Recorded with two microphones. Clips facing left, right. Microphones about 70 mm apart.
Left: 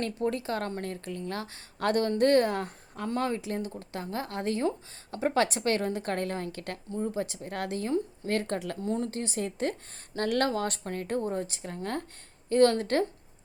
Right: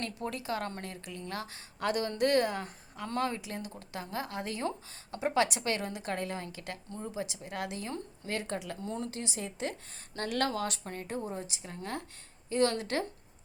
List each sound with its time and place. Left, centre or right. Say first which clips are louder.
0.3 s speech: left 3 dB; left
8.8 s speech: left 6 dB; left